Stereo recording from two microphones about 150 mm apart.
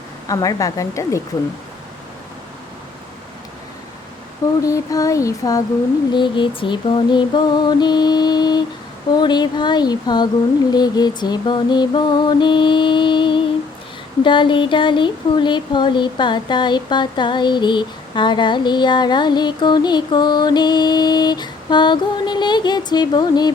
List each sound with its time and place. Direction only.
0.3 s mantra: 20° left (ahead or behind)
4.6 s mantra: 20° left (ahead or behind)
6.1 s speech: 30° left (ahead or behind)
6.6 s mantra: 30° left (ahead or behind)
10.7 s speech: 25° left (ahead or behind)